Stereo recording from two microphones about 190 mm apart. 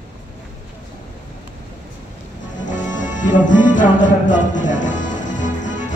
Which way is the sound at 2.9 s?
40° left (ahead or behind).